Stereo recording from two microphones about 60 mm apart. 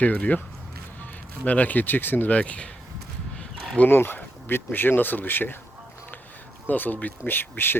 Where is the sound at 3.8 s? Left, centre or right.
Left.